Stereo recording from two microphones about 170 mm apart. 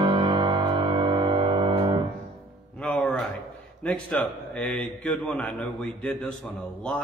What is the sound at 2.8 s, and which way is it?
Music, 5° left (ahead or behind).